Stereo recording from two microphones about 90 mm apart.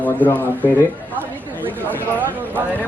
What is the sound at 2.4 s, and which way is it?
Speech, 20° right (ahead or behind).